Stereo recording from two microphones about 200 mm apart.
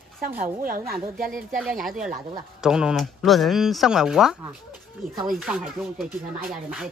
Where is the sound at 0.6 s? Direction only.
45° right (ahead or behind).